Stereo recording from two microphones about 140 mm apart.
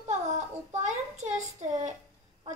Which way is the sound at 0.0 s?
55° right (ahead or behind).